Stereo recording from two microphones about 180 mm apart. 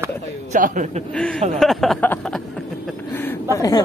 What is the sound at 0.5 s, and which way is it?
Speech, 45° right (ahead or behind).